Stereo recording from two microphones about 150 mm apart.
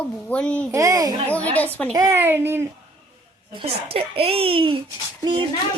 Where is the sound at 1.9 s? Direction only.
25° right (ahead or behind).